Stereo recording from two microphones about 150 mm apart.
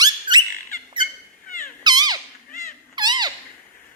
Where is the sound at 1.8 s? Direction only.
25° right (ahead or behind).